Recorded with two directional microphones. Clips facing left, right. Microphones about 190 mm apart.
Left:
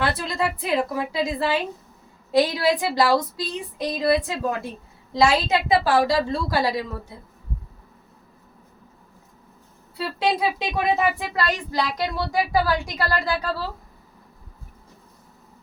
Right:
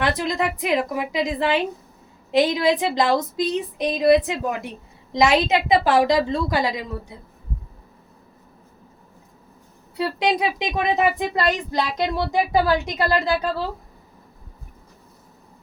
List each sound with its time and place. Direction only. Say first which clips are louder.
0.0 s a woman's voice: right 2 dB; 15° right (ahead or behind)
10.2 s speech: left 1 dB; 15° right (ahead or behind)